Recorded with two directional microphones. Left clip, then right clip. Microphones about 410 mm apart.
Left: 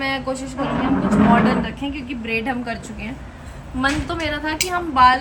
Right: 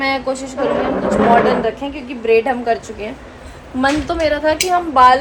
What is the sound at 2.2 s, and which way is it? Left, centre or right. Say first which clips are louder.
A woman's voice: right 11 dB; centre.